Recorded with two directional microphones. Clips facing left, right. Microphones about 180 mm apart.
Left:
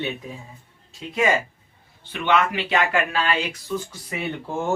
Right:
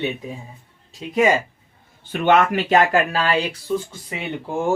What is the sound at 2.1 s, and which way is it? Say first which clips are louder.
Speech: right 5 dB; 45° right (ahead or behind).